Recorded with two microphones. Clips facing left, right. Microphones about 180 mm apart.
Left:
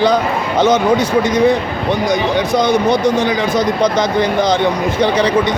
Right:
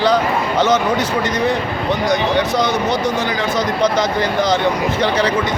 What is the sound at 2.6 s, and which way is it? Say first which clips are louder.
Speech: left 4 dB; 15° left (ahead or behind).